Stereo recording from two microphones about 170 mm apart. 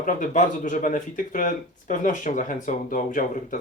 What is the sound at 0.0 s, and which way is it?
Speech, 50° left (ahead or behind).